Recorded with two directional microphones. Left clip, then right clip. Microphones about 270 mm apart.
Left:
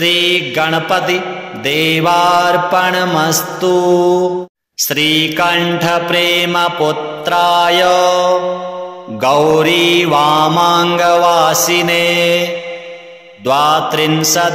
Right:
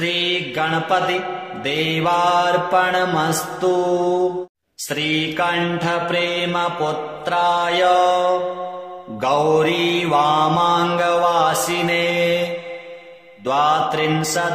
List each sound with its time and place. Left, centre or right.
0.0 s mantra: left
13.5 s mantra: left